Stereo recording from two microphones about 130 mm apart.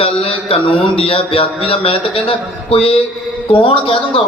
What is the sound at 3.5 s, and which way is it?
Speech, 40° left (ahead or behind).